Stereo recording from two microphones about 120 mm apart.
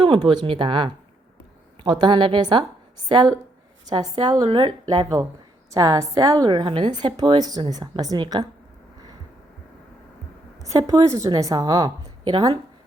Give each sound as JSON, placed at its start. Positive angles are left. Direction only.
{"t": 0.0, "sound": "a woman's voice", "side_deg": -40}
{"t": 6.5, "sound": "a woman's voice", "side_deg": -45}
{"t": 10.6, "sound": "a woman's voice", "side_deg": -30}